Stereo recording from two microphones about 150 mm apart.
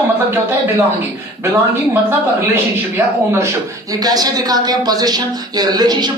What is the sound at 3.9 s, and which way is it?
Speech, 25° right (ahead or behind).